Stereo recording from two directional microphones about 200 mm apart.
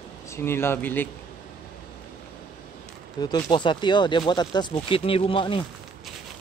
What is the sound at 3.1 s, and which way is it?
Speech, 20° left (ahead or behind).